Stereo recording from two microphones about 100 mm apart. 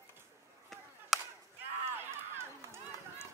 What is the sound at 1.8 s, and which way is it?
Run, 25° right (ahead or behind).